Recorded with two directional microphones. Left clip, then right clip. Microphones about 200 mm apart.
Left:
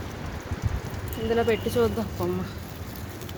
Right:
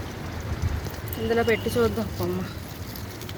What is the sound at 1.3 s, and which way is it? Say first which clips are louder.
Speech: right 1 dB; 20° left (ahead or behind).